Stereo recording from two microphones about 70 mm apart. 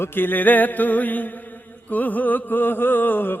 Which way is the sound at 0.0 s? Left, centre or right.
Left.